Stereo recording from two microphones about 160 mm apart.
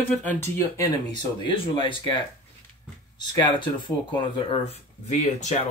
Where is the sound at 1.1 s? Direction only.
30° left (ahead or behind).